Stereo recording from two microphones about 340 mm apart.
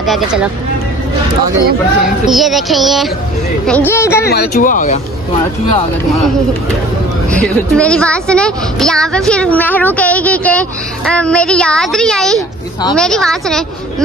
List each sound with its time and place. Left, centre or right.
0.0 s speech: centre
2.0 s a woman's voice: centre
4.3 s speech: left
7.2 s a woman's voice: centre